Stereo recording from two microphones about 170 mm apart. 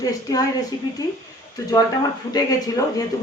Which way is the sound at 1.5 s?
20° left (ahead or behind).